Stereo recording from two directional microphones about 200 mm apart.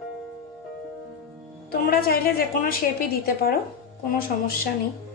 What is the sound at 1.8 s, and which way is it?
A woman's voice, 50° left (ahead or behind).